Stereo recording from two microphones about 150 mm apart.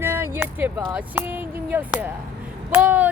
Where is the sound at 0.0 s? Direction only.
15° right (ahead or behind).